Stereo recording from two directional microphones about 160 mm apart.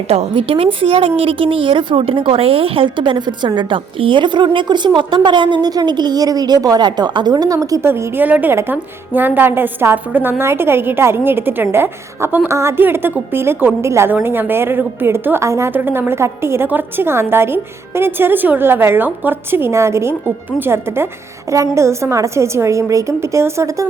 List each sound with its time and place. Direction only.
0.1 s a woman's voice: 40° right (ahead or behind); by 23.8 s 20° right (ahead or behind)